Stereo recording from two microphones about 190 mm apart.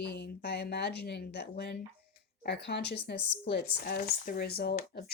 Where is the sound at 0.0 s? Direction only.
60° left (ahead or behind).